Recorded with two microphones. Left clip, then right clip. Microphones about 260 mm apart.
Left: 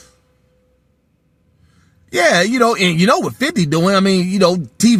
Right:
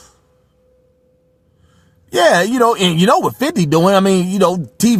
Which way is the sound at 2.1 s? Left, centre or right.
Right.